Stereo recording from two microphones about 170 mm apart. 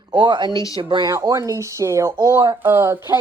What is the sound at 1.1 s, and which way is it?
Speech, 15° right (ahead or behind).